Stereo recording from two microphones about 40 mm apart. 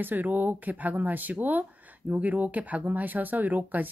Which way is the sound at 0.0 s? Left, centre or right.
Right.